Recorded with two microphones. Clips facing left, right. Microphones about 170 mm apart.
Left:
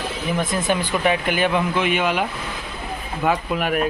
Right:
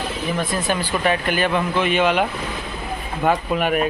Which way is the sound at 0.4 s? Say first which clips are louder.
Left 2 dB; 20° left (ahead or behind).